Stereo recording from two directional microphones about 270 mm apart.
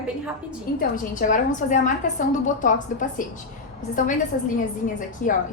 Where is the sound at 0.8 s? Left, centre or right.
Left.